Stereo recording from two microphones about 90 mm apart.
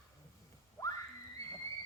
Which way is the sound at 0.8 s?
35° left (ahead or behind).